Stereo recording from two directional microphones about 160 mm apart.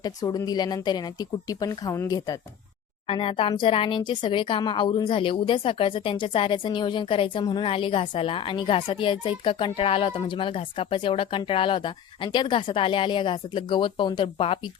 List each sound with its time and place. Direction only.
0.0 s a woman's voice: 25° left (ahead or behind)
3.1 s speech: 35° left (ahead or behind)